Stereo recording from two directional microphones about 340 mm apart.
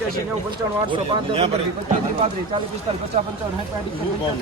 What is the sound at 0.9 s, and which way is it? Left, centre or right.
Speech, centre.